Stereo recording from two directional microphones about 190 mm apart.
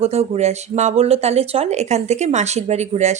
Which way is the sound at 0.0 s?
35° right (ahead or behind).